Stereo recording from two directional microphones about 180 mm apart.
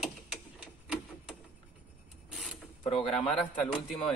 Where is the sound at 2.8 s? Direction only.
35° left (ahead or behind).